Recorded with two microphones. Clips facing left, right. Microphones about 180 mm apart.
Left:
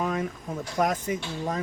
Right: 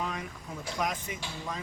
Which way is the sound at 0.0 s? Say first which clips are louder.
Left 8 dB; 50° left (ahead or behind).